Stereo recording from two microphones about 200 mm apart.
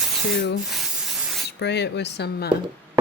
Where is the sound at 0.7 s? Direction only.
Centre (ahead or behind).